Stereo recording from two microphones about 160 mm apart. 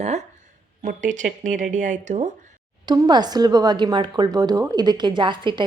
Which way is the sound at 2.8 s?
25° right (ahead or behind).